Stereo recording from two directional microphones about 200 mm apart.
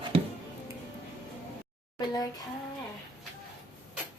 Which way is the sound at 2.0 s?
20° left (ahead or behind).